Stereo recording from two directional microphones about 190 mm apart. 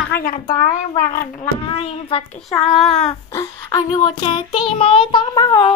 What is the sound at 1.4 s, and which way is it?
Child singing, 30° left (ahead or behind).